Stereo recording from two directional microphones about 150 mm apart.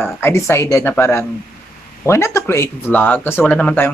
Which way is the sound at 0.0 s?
15° left (ahead or behind).